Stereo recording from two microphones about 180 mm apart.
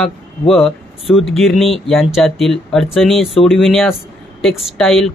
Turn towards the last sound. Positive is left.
turn(degrees=0)  # may be behind; listen again after turning